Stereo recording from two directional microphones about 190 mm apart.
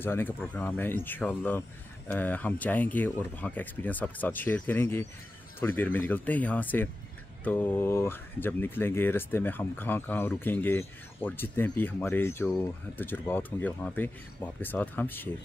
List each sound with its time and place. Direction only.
0.0 s speech: 10° left (ahead or behind)